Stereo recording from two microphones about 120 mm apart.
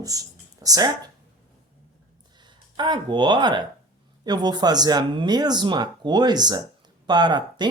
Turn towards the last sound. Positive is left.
turn(degrees=-35)  # may be behind; listen again after turning